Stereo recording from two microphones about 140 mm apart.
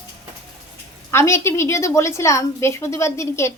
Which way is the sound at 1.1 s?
20° left (ahead or behind).